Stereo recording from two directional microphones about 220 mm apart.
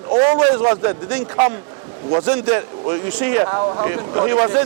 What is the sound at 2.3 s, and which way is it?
Speech, 20° right (ahead or behind).